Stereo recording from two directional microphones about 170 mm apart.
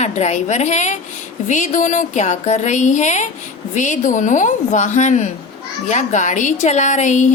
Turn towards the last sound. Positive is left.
turn(degrees=45)  # may be behind; listen again after turning